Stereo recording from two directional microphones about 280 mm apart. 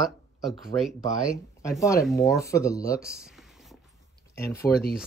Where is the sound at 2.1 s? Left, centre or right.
Centre.